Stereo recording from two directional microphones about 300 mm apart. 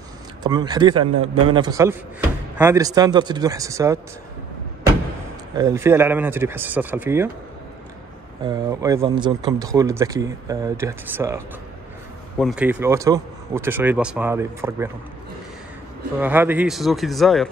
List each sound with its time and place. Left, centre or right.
0.4 s speech: centre
5.6 s speech: centre
8.5 s speech: centre
16.2 s speech: centre